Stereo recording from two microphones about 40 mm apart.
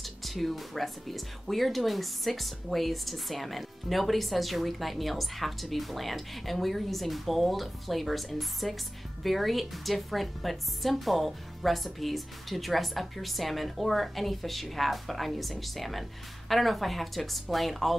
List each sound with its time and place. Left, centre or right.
0.0 s speech: centre